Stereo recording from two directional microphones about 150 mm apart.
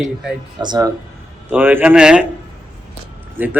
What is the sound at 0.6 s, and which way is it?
Speech, 25° right (ahead or behind).